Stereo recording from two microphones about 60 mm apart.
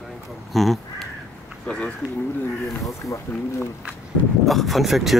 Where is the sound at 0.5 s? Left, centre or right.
Centre.